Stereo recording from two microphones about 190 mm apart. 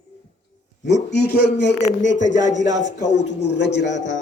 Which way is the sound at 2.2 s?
40° left (ahead or behind).